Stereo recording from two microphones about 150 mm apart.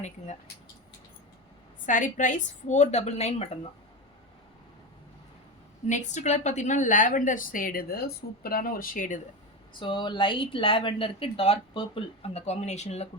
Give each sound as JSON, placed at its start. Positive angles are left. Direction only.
{"t": 1.9, "sound": "a woman's voice", "side_deg": 60}
{"t": 5.9, "sound": "a woman's voice", "side_deg": 55}
{"t": 9.7, "sound": "a woman's voice", "side_deg": 30}